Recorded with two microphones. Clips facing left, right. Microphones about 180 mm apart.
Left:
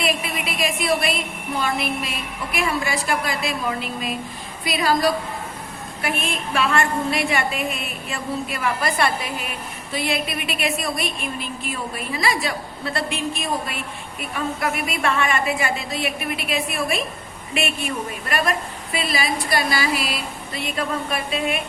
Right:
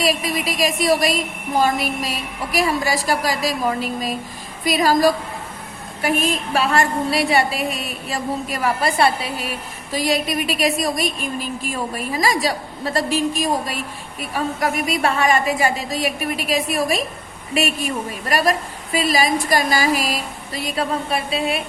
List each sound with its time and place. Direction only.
0.0 s a woman's voice: 35° right (ahead or behind)